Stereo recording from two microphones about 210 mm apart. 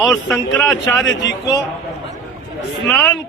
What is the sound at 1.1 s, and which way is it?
Speech, 60° left (ahead or behind).